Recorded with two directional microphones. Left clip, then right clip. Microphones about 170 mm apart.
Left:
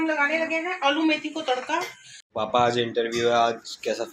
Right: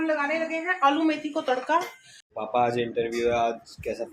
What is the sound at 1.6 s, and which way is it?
Speech, 60° right (ahead or behind).